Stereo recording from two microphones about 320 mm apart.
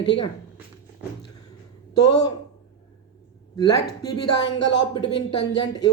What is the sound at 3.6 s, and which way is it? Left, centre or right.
A man's voice, centre.